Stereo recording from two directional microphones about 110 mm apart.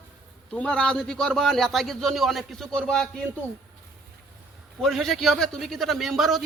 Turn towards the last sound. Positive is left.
turn(degrees=0)  # may be behind; listen again after turning